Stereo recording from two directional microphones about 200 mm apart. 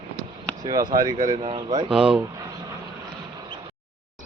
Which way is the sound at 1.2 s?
35° right (ahead or behind).